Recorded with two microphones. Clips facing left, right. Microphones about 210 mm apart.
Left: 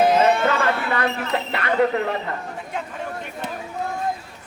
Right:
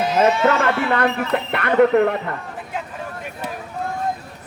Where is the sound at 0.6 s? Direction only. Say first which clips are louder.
Right 3 dB; 55° right (ahead or behind).